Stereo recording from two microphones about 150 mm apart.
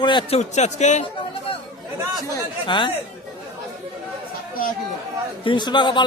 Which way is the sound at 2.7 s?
35° left (ahead or behind).